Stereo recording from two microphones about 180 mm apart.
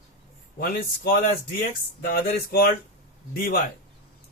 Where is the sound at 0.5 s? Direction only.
55° left (ahead or behind).